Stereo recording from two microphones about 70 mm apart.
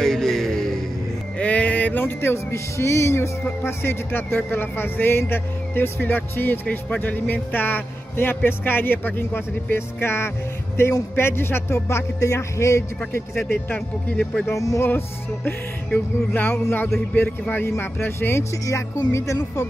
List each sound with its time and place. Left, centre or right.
0.0 s music: centre
1.4 s music: centre; by 13.7 s left
13.7 s speech: centre
14.5 s speech: left
14.9 s music: left
19.1 s speech: left